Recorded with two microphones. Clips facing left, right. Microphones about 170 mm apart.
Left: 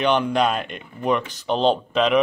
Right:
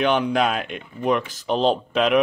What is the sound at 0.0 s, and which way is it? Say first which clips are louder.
Speech: even; centre (ahead or behind).